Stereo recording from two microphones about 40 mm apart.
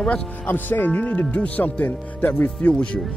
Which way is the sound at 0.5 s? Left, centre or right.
Left.